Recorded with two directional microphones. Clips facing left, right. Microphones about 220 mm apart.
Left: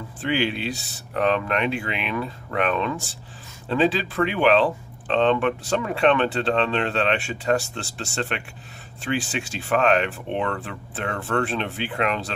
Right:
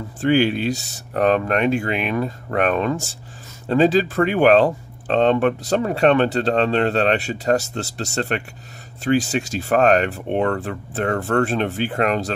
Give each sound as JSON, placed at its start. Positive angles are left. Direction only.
{"t": 0.2, "sound": "speech", "side_deg": -45}